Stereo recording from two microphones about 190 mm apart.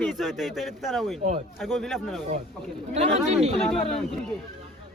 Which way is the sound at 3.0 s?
35° right (ahead or behind).